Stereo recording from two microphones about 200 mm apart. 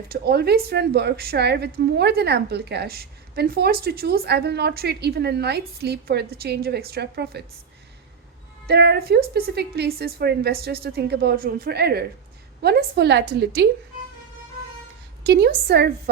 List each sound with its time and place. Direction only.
0.1 s a woman's voice: 50° right (ahead or behind)
8.6 s a woman's voice: 55° right (ahead or behind)
15.3 s a woman's voice: 55° right (ahead or behind)